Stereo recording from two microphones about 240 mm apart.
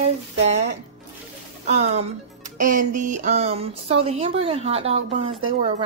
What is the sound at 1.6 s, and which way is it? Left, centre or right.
Music, right.